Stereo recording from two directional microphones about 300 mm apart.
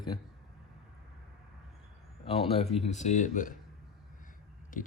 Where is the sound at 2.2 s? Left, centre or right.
Centre.